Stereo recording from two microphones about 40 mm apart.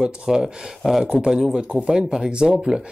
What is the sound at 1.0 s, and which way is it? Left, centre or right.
Speech, right.